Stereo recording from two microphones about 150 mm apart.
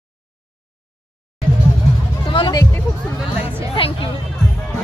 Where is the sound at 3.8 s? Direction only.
35° left (ahead or behind).